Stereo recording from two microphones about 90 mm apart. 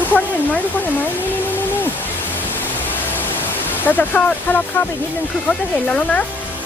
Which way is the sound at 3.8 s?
20° left (ahead or behind).